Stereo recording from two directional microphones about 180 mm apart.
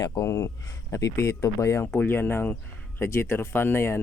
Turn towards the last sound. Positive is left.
turn(degrees=15)  # may be behind; listen again after turning